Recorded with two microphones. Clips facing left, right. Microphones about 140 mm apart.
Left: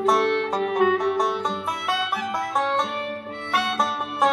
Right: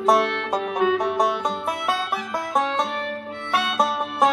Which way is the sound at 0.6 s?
50° left (ahead or behind).